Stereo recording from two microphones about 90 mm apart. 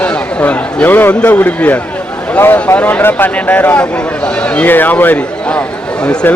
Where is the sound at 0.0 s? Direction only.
15° left (ahead or behind).